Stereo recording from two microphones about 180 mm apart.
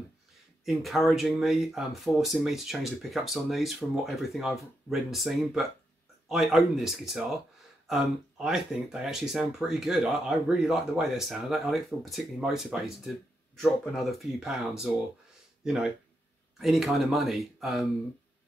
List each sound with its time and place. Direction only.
0.7 s speech: centre (ahead or behind)